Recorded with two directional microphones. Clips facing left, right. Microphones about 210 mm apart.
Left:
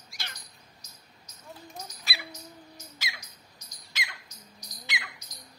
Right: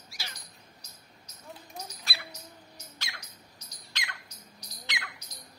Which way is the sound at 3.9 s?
5° left (ahead or behind).